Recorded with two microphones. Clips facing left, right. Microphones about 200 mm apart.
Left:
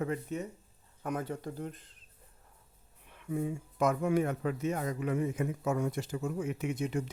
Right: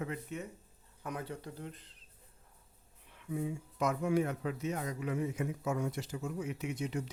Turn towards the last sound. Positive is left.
turn(degrees=55)  # may be behind; listen again after turning